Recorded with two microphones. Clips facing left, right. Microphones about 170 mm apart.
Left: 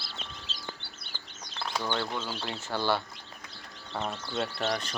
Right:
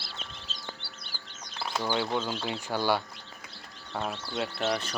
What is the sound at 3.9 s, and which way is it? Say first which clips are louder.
Speech: even; centre (ahead or behind).